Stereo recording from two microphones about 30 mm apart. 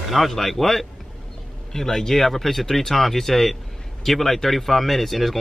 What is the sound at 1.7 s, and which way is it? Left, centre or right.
Speech, centre.